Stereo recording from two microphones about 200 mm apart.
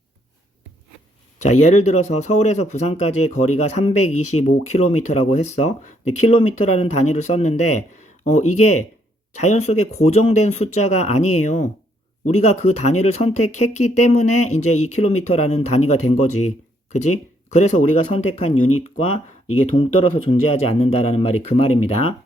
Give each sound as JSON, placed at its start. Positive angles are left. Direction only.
{"t": 1.4, "sound": "speech", "side_deg": 35}
{"t": 16.9, "sound": "speech", "side_deg": 35}